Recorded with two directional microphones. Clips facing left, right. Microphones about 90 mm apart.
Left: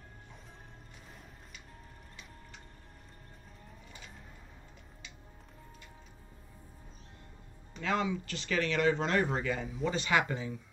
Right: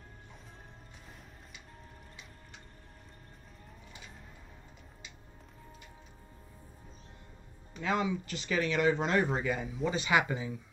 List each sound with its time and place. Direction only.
7.8 s speech: 15° right (ahead or behind)
9.7 s speech: 5° right (ahead or behind)
9.9 s speech: 15° right (ahead or behind)